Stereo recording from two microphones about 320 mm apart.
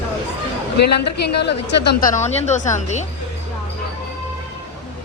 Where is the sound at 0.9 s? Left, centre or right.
Left.